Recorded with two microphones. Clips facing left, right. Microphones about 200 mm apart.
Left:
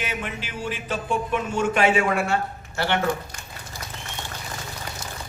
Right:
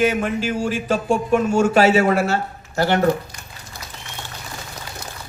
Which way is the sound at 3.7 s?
60° right (ahead or behind).